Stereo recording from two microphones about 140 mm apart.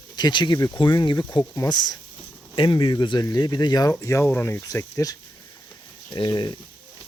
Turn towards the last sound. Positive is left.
turn(degrees=35)  # may be behind; listen again after turning